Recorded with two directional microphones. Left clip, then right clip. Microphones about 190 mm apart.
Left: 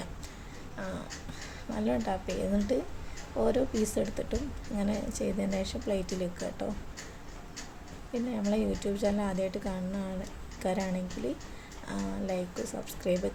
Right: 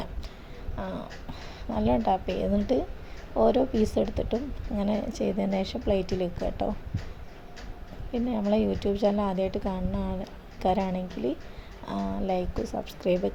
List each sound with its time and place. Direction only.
0.8 s a woman's voice: 15° right (ahead or behind)
8.1 s a woman's voice: 20° right (ahead or behind)